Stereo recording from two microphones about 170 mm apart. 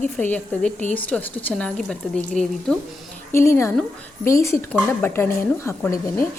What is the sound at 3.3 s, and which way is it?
A woman's voice, 15° left (ahead or behind).